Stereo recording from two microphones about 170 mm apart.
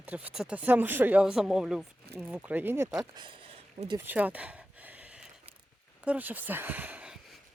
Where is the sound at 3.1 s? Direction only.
30° right (ahead or behind).